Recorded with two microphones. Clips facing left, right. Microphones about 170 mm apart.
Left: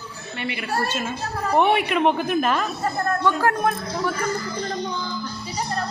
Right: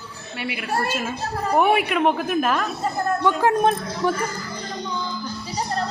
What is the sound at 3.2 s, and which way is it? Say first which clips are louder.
Speech: right 3 dB; 20° right (ahead or behind).